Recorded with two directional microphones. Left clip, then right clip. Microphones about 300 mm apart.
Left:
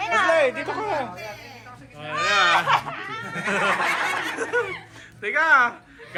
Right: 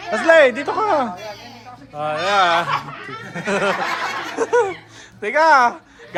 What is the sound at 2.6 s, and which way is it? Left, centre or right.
Speech, left.